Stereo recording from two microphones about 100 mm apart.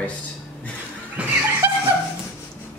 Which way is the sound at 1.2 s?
10° right (ahead or behind).